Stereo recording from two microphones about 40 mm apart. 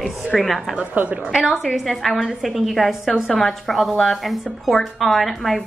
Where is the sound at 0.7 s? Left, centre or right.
Right.